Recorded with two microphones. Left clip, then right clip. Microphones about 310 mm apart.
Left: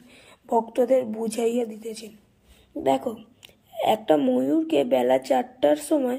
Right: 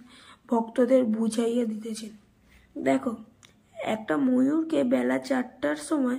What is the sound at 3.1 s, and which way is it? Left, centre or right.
Speech, left.